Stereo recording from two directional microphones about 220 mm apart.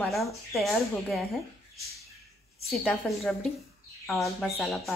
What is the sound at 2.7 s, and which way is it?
Speech, centre (ahead or behind).